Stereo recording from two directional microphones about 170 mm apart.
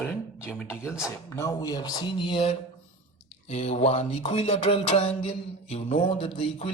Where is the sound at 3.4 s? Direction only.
40° left (ahead or behind).